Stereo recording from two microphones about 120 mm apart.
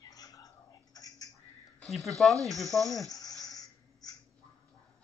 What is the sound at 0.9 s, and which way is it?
Frog, 30° left (ahead or behind).